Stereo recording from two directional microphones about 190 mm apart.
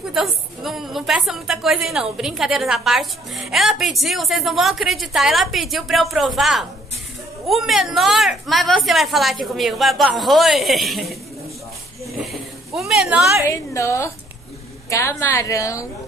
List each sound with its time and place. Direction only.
0.1 s a woman's voice: centre (ahead or behind)
12.0 s a sound: centre (ahead or behind)
13.5 s a woman's voice: 15° left (ahead or behind)